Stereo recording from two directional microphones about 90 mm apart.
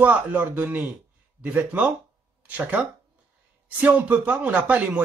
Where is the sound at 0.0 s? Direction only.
20° right (ahead or behind).